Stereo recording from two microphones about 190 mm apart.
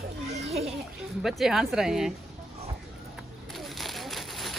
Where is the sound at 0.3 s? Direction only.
35° right (ahead or behind).